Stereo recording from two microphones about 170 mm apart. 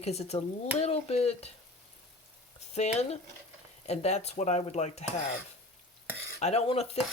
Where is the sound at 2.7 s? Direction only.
40° left (ahead or behind).